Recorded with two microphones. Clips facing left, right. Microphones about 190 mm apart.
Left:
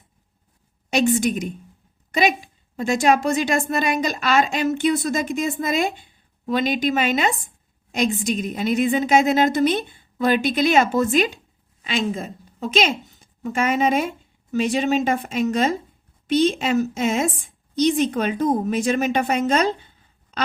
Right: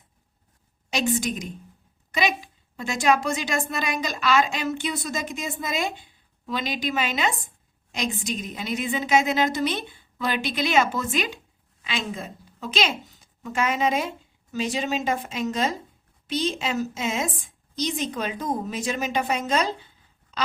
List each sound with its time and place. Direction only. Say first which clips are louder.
1.2 s a woman's voice: left 7 dB; 55° left (ahead or behind)